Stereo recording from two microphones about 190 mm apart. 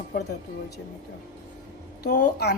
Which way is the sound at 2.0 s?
55° left (ahead or behind).